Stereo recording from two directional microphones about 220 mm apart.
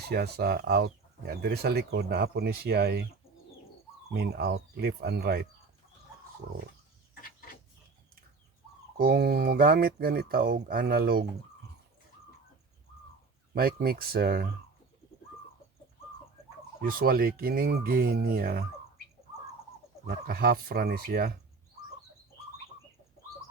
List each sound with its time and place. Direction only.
0.1 s speech: 45° right (ahead or behind)
4.1 s speech: 50° right (ahead or behind)
9.0 s speech: 45° right (ahead or behind)
13.5 s speech: 45° right (ahead or behind)
16.8 s speech: 40° right (ahead or behind)
20.1 s speech: 45° right (ahead or behind)